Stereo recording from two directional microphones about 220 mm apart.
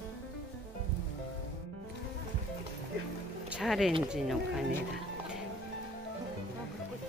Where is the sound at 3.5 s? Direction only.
Centre (ahead or behind).